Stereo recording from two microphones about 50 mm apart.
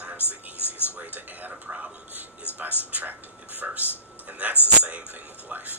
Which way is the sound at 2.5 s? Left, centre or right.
Left.